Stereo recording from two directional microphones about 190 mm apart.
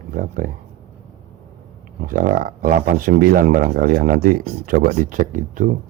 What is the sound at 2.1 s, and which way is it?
Speech, 50° right (ahead or behind).